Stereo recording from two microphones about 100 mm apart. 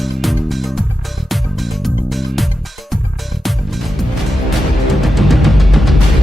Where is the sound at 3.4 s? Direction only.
Centre (ahead or behind).